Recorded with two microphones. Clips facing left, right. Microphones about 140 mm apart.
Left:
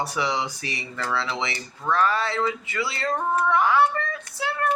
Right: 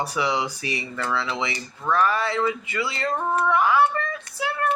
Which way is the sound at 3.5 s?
20° right (ahead or behind).